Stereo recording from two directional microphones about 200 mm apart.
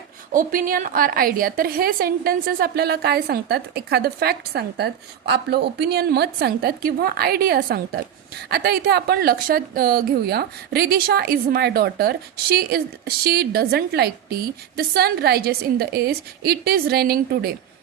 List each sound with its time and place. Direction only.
0.3 s speech: 45° right (ahead or behind)